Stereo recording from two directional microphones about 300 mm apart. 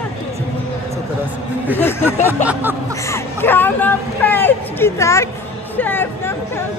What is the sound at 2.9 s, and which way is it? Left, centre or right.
Whimper, centre.